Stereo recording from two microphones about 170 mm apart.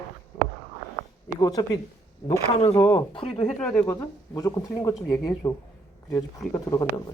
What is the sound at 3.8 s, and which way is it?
Speech, 20° left (ahead or behind).